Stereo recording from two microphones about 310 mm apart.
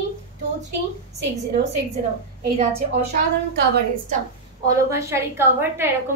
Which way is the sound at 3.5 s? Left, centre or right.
Right.